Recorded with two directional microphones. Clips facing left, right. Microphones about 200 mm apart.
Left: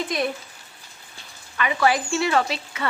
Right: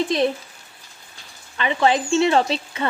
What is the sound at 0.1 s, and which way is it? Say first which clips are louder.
Speech: right 5 dB; 30° right (ahead or behind).